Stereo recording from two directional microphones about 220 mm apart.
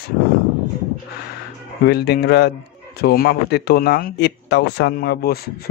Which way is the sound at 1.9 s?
45° left (ahead or behind).